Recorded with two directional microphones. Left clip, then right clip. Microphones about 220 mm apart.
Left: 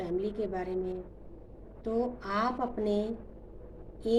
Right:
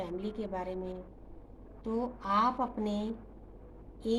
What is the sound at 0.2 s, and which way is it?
Speech, 25° right (ahead or behind).